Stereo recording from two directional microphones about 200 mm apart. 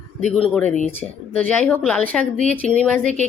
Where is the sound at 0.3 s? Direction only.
5° left (ahead or behind).